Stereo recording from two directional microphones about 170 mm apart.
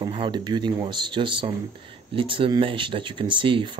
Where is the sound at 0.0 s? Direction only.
30° right (ahead or behind).